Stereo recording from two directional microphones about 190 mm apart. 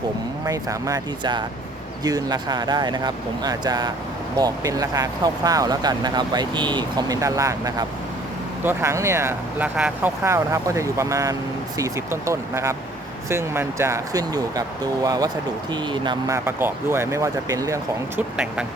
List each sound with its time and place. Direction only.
0.4 s speech: 15° right (ahead or behind)
18.2 s speech: 5° right (ahead or behind)